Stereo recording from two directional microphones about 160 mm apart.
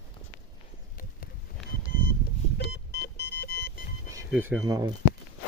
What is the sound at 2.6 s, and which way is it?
Vehicle, 90° left.